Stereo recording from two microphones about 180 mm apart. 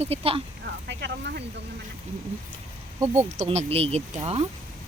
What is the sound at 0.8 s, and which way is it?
Speech, 75° right (ahead or behind).